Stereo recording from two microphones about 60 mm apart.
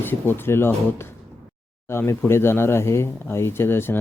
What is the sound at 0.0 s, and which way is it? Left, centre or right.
Speech, left.